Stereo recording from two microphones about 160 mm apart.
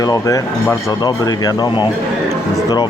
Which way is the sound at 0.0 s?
20° left (ahead or behind).